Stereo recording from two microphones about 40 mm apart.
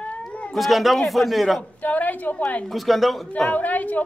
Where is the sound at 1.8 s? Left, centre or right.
Left.